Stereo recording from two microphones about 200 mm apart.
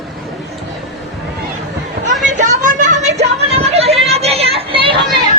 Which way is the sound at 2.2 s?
40° right (ahead or behind).